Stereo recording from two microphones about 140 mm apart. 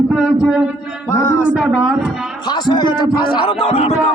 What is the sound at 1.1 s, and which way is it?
Speech, 20° left (ahead or behind).